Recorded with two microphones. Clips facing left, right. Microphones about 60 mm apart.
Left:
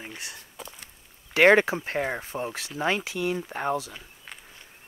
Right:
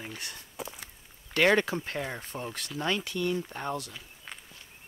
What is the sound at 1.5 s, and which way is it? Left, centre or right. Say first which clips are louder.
Speech: left 5 dB; left.